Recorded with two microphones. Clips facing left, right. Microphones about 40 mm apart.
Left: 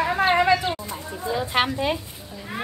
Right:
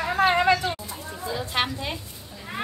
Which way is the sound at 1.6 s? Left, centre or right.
Centre.